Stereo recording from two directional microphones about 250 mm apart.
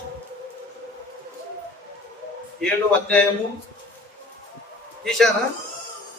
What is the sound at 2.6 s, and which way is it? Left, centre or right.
Speech, centre.